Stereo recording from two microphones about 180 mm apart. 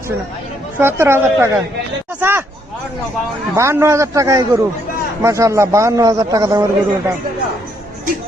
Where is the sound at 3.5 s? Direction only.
15° right (ahead or behind).